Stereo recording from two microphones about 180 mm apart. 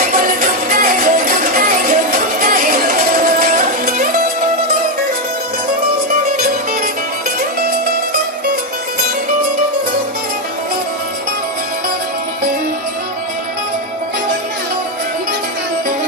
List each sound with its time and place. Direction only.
0.2 s music: 50° right (ahead or behind)